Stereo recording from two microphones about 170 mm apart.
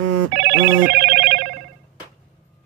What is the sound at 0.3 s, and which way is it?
Telephone bell ringing, 90° right.